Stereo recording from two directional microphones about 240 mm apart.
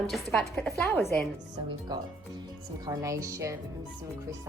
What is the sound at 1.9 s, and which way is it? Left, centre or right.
A woman's voice, centre.